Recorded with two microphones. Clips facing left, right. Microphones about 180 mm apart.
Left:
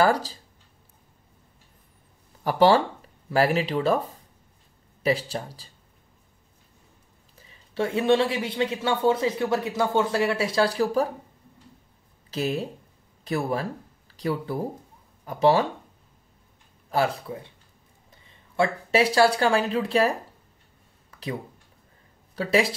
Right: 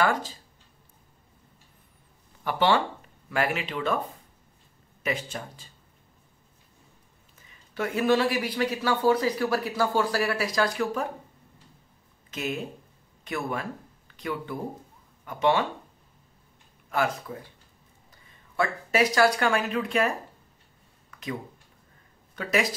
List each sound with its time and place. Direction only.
0.0 s speech: 35° left (ahead or behind)
2.4 s speech: 40° left (ahead or behind)
5.0 s speech: 35° left (ahead or behind)
7.3 s speech: 30° left (ahead or behind)
12.3 s speech: 35° left (ahead or behind)
16.9 s speech: 30° left (ahead or behind)
22.3 s speech: 30° left (ahead or behind)